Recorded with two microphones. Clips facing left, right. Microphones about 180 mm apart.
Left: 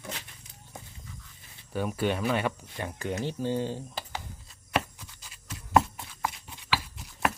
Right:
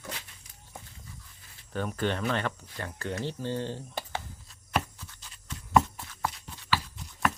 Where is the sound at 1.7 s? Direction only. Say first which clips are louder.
Left 2 dB; 10° left (ahead or behind).